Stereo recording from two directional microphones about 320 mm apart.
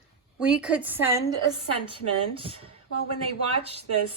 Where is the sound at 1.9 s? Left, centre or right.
Centre.